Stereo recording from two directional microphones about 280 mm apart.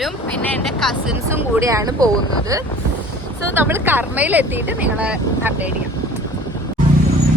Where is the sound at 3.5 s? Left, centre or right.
Centre.